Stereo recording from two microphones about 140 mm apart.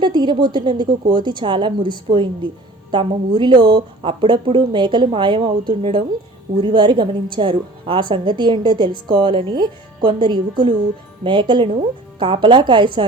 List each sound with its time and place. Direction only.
0.0 s a woman's voice: 30° right (ahead or behind)